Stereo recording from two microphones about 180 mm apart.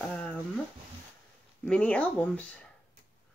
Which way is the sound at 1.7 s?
5° left (ahead or behind).